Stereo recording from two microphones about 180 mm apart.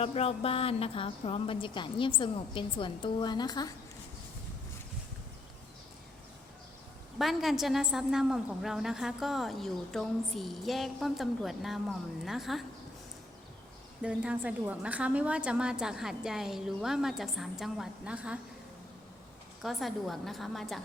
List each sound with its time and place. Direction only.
0.0 s a woman's voice: 35° left (ahead or behind)
7.2 s a woman's voice: centre (ahead or behind)
14.0 s a woman's voice: 5° right (ahead or behind)
19.6 s a woman's voice: centre (ahead or behind)